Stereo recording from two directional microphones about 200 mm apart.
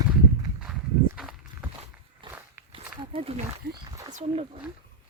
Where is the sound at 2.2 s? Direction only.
25° right (ahead or behind).